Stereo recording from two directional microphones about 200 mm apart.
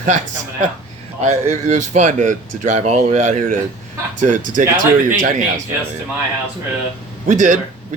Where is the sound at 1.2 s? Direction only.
35° right (ahead or behind).